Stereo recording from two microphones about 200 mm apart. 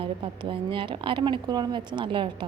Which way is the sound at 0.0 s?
25° right (ahead or behind).